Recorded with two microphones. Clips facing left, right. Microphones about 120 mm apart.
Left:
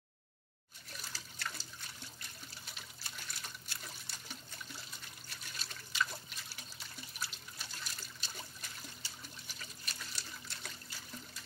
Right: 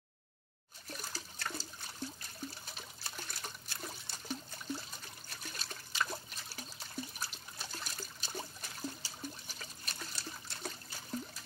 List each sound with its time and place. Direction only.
0.8 s toilet flush: 40° right (ahead or behind)
2.6 s water: 40° right (ahead or behind)
5.5 s liquid: 40° right (ahead or behind)
7.7 s water: 40° right (ahead or behind)
10.5 s toilet flush: 40° right (ahead or behind)